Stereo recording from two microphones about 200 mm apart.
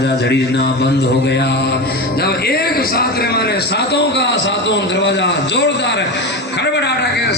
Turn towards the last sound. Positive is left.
turn(degrees=55)  # may be behind; listen again after turning